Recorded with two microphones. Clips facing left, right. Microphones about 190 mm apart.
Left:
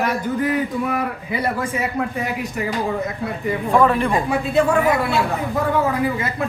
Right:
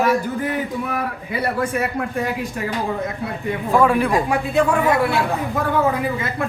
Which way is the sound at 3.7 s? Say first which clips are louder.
Right 1 dB; 10° right (ahead or behind).